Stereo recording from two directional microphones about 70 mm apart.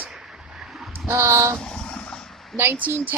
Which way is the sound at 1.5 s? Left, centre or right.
Centre.